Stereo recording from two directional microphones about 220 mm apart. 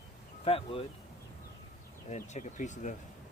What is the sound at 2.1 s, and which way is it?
Speech, 30° left (ahead or behind).